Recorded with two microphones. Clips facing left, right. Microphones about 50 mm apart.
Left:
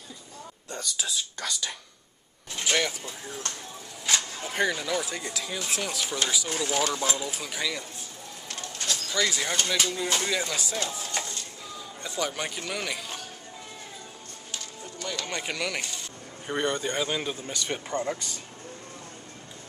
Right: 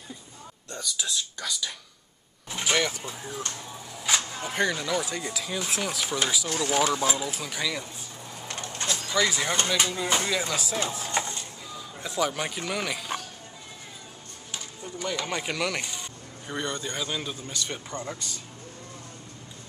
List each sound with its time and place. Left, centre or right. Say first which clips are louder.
0.7 s speech: right 1 dB; centre
8.9 s speech: right 2 dB; centre
11.1 s a sound: right 4 dB; right
12.0 s speech: right 3 dB; centre
14.5 s a sound: right 2 dB; centre
16.4 s speech: left 4 dB; left
17.6 s speech: left 5 dB; centre